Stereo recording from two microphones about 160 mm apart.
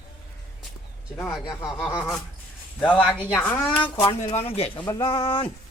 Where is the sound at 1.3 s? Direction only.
25° left (ahead or behind).